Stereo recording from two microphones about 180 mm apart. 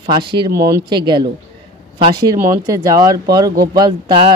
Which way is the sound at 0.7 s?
20° right (ahead or behind).